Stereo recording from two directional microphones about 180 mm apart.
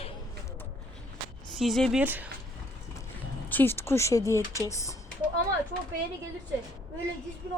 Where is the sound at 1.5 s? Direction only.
Centre (ahead or behind).